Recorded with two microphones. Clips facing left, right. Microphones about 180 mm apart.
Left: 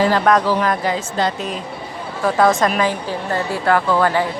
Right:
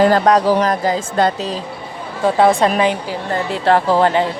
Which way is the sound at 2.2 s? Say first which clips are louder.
Right 2 dB; 30° right (ahead or behind).